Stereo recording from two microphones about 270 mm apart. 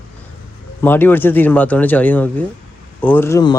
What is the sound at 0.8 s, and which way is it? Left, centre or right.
Speech, centre.